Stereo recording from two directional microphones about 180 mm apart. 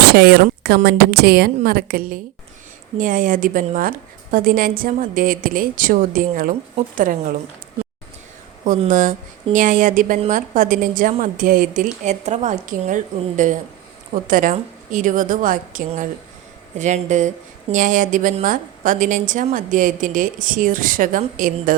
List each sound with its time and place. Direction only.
0.1 s a woman's voice: 65° right (ahead or behind); by 7.3 s 45° right (ahead or behind)
8.9 s a woman's voice: 45° right (ahead or behind)